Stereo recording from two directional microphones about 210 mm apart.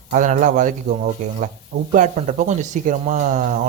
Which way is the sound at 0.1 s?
40° right (ahead or behind).